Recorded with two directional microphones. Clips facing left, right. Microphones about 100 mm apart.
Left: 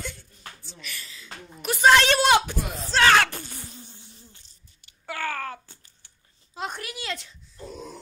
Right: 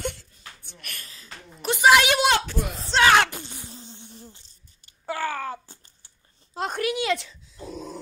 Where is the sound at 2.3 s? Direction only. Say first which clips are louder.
Left 3 dB; 15° left (ahead or behind).